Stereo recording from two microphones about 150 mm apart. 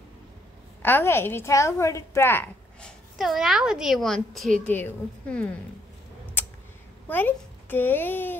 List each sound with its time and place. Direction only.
0.8 s a woman's voice: 15° left (ahead or behind)
3.2 s a woman's voice: centre (ahead or behind)
6.4 s tick: 15° left (ahead or behind)
7.1 s a child's voice: 10° left (ahead or behind)